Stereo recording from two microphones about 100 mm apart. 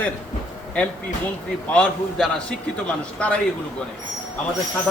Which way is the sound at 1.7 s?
5° left (ahead or behind).